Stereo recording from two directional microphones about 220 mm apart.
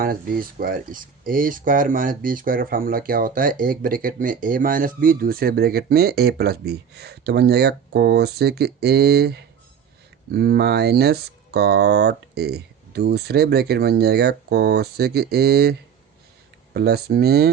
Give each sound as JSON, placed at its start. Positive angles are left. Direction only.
{"t": 0.0, "sound": "speech", "side_deg": -40}
{"t": 16.7, "sound": "speech", "side_deg": -45}